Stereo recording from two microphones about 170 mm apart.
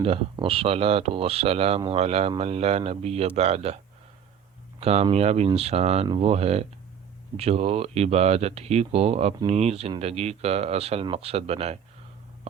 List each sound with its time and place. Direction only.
0.0 s speech: 35° right (ahead or behind)
4.8 s speech: 40° right (ahead or behind)